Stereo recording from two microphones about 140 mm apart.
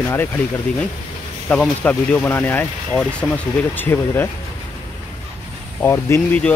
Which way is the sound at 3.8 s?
15° left (ahead or behind).